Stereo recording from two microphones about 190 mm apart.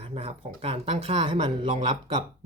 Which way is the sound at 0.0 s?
30° right (ahead or behind).